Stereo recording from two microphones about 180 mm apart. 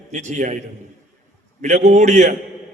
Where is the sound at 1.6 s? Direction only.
40° right (ahead or behind).